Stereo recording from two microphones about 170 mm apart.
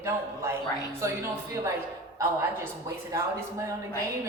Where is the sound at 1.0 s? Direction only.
15° right (ahead or behind).